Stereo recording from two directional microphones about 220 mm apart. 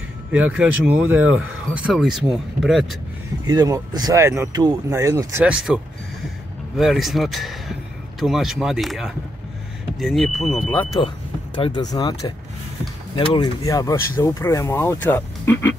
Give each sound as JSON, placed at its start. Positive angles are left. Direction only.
{"t": 0.3, "sound": "speech", "side_deg": -5}
{"t": 3.4, "sound": "speech", "side_deg": -15}
{"t": 5.4, "sound": "speech", "side_deg": -5}
{"t": 6.8, "sound": "speech", "side_deg": 0}
{"t": 11.5, "sound": "speech", "side_deg": 20}